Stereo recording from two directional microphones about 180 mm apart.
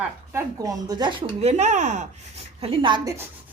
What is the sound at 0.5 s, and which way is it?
Speech, 20° right (ahead or behind).